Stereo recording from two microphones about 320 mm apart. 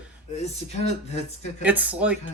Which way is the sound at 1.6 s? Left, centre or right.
Centre.